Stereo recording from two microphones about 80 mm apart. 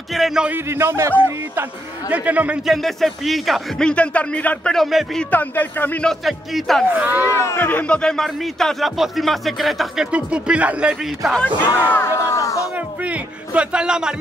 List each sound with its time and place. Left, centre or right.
0.1 s speech: centre
0.7 s a man's voice: right
1.1 s a man's voice: right
2.6 s speech: centre
3.8 s speech: centre
4.7 s speech: centre
5.3 s speech: left
6.0 s speech: centre
6.9 s a man's voice: centre
7.3 s speech: left; by 10.0 s centre
10.1 s speech: centre
11.4 s speech: left
12.7 s music: centre